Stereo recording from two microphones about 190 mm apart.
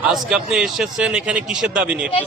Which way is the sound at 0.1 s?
Centre (ahead or behind).